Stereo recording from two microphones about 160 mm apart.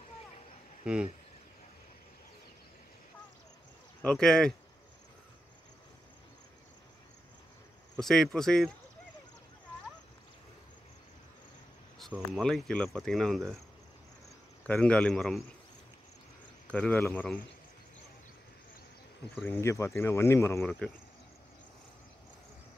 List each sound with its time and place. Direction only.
0.8 s speech: 5° right (ahead or behind)
4.0 s speech: 5° left (ahead or behind)
8.0 s speech: centre (ahead or behind)
12.4 s speech: 5° left (ahead or behind)
14.7 s speech: 5° left (ahead or behind)
16.6 s speech: 10° left (ahead or behind)
19.4 s speech: 15° left (ahead or behind)